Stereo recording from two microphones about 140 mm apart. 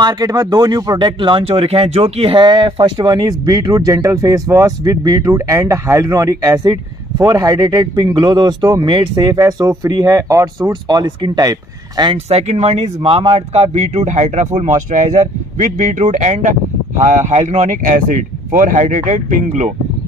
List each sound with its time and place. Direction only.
0.0 s speech: 25° right (ahead or behind)
12.3 s speech: 50° right (ahead or behind)
13.5 s speech: 50° right (ahead or behind)
17.8 s speech: 70° right (ahead or behind)